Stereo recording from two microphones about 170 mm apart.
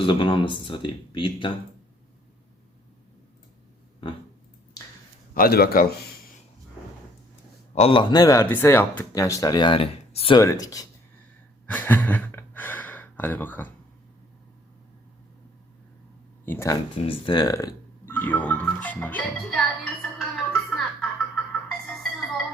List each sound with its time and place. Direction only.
0.0 s speech: 30° left (ahead or behind)
5.3 s speech: 60° left (ahead or behind)
7.8 s speech: 30° left (ahead or behind)
10.4 s speech: 20° left (ahead or behind)
11.6 s a sound: 10° left (ahead or behind)
16.5 s speech: 15° left (ahead or behind)
17.1 s music: 30° left (ahead or behind); by 21.4 s 5° left (ahead or behind)